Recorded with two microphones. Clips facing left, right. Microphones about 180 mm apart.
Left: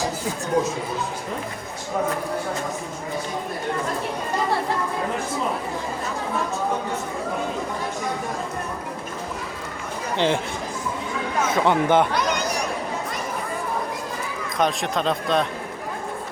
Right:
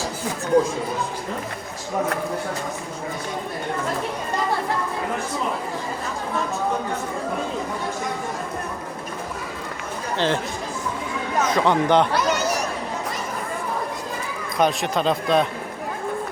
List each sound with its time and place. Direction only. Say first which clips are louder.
10.2 s speech: left 1 dB; 15° left (ahead or behind)
11.4 s speech: even; 10° left (ahead or behind)
14.6 s speech: right 2 dB; centre (ahead or behind)